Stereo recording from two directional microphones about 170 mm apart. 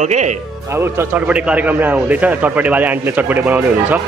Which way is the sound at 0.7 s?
10° right (ahead or behind).